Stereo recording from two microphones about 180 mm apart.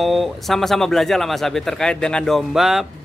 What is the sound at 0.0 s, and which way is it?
Speech, centre (ahead or behind).